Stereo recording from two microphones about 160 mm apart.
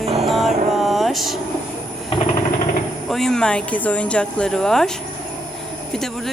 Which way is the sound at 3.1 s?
Centre (ahead or behind).